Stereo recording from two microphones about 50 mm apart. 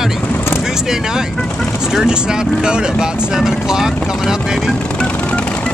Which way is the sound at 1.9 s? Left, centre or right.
Centre.